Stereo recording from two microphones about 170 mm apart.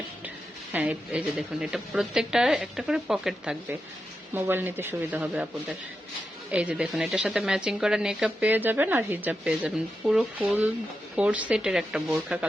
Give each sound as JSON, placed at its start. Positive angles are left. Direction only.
{"t": 0.7, "sound": "a woman's voice", "side_deg": -10}